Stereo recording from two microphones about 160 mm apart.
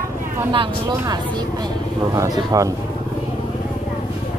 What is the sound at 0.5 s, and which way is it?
Speech, 30° right (ahead or behind).